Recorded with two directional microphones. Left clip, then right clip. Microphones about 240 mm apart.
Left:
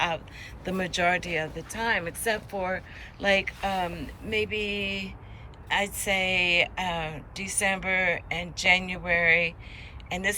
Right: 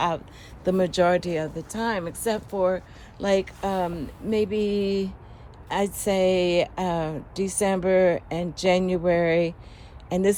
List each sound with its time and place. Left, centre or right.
0.6 s a woman's voice: centre